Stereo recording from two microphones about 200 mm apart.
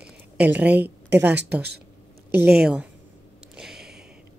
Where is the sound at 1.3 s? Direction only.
55° right (ahead or behind).